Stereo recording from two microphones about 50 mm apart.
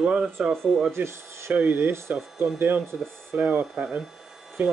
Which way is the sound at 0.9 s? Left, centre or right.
Right.